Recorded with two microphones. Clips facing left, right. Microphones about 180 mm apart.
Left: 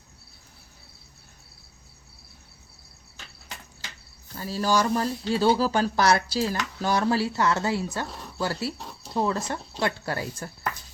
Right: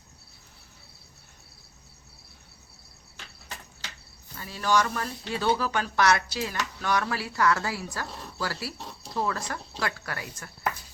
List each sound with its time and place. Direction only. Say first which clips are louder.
4.4 s speech: left 2 dB; 35° left (ahead or behind)
8.0 s speech: left 2 dB; centre (ahead or behind)
8.4 s speech: left 5 dB; 25° left (ahead or behind)
8.8 s a sound: even; centre (ahead or behind)
9.1 s speech: left 4 dB; 30° left (ahead or behind)